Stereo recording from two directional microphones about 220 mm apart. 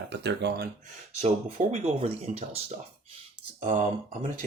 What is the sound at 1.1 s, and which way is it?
Speech, 30° right (ahead or behind).